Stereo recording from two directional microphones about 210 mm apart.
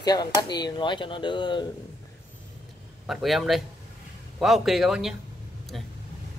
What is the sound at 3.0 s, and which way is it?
Speech, centre (ahead or behind).